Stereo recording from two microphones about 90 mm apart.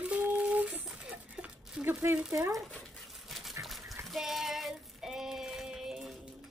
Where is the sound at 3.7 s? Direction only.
Centre (ahead or behind).